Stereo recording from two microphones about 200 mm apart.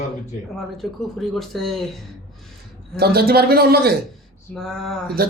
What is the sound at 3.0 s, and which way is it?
Speech, 50° right (ahead or behind).